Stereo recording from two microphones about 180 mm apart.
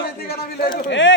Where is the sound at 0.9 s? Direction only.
90° left.